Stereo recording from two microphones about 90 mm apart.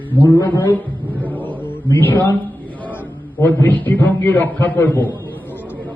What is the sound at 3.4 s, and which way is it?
A man's voice, 20° left (ahead or behind).